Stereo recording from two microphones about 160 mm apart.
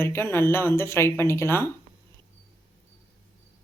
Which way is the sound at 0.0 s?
15° left (ahead or behind).